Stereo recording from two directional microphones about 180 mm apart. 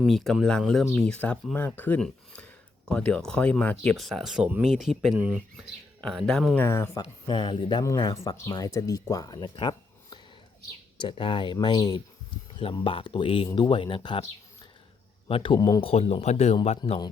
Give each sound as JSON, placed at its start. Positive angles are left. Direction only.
{"t": 0.0, "sound": "speech", "side_deg": 0}
{"t": 6.7, "sound": "speech", "side_deg": 15}
{"t": 15.3, "sound": "speech", "side_deg": 30}
{"t": 15.8, "sound": "speech", "side_deg": 35}